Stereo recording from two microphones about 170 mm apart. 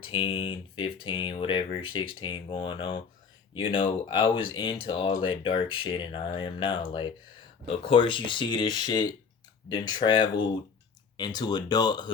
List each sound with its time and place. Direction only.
0.0 s speech: 30° left (ahead or behind)